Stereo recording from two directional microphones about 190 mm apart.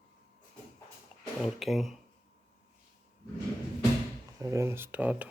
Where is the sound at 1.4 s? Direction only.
Centre (ahead or behind).